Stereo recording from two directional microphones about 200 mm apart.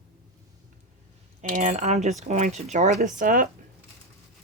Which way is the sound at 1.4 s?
40° right (ahead or behind).